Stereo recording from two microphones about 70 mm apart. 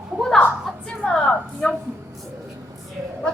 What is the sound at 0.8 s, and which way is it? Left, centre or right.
Speech, centre.